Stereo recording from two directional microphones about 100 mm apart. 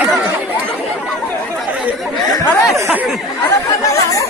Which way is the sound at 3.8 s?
35° left (ahead or behind).